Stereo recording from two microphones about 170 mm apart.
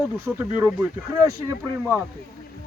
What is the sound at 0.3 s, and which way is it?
Speech, 10° right (ahead or behind).